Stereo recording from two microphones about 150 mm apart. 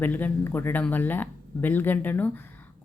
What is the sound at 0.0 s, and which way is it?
Speech, 10° left (ahead or behind).